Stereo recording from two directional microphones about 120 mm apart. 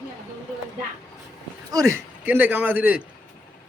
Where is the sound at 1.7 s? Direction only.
25° right (ahead or behind).